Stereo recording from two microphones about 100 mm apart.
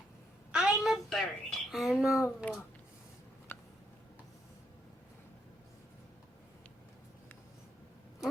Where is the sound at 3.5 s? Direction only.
20° left (ahead or behind).